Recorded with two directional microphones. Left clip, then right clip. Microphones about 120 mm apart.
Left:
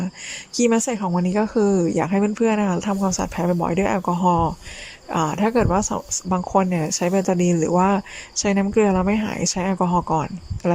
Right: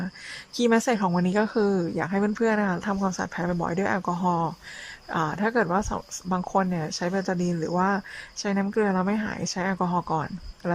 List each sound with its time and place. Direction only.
0.5 s speech: 15° left (ahead or behind)
3.1 s speech: 20° left (ahead or behind)